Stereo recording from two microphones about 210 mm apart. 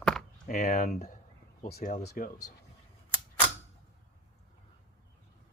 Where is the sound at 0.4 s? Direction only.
40° left (ahead or behind).